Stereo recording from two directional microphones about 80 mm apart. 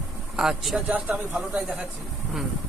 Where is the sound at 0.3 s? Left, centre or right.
Centre.